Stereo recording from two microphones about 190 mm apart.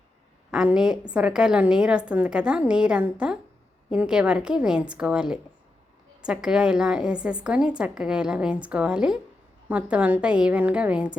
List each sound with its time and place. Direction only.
0.5 s a woman's voice: 5° right (ahead or behind)